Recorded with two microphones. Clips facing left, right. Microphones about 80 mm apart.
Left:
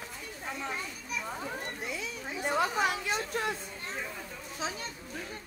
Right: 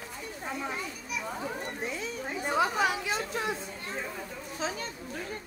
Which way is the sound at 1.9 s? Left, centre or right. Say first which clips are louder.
Right 3 dB; right.